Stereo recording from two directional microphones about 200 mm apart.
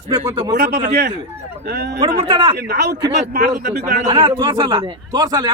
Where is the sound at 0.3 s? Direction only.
20° right (ahead or behind).